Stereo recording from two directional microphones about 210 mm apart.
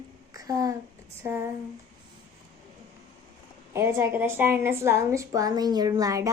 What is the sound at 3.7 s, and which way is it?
A woman's voice, 10° right (ahead or behind).